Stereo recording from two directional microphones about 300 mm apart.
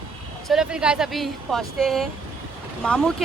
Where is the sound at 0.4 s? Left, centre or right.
Centre.